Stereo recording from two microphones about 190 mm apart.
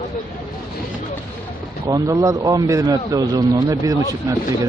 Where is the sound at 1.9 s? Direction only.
15° right (ahead or behind).